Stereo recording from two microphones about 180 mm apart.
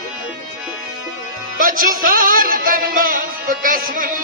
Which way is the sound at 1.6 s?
50° right (ahead or behind).